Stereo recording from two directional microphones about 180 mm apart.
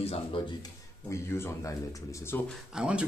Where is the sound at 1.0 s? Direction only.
15° left (ahead or behind).